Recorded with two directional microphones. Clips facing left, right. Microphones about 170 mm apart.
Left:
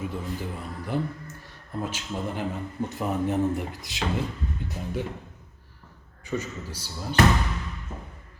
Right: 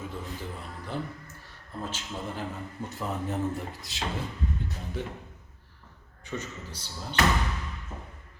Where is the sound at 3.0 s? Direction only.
15° left (ahead or behind).